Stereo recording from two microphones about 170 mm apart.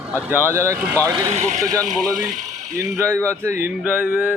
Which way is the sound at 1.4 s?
45° right (ahead or behind).